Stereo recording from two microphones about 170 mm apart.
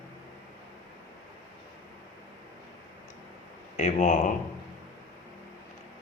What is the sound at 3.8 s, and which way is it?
Speech, 45° left (ahead or behind).